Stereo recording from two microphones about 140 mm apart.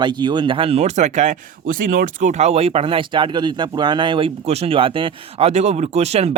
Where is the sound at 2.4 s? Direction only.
45° right (ahead or behind).